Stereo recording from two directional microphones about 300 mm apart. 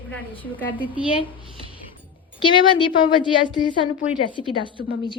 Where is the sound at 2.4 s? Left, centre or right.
Centre.